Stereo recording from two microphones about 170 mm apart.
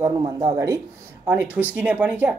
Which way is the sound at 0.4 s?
20° right (ahead or behind).